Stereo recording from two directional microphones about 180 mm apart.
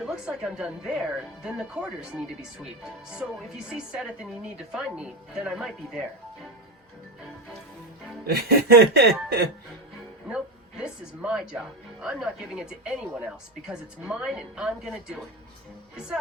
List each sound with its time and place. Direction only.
0.0 s speech: 5° right (ahead or behind)
8.3 s snicker: 60° right (ahead or behind)
10.2 s speech: 5° right (ahead or behind)